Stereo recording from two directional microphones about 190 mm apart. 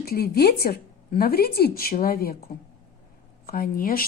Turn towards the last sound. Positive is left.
turn(degrees=50)  # may be behind; listen again after turning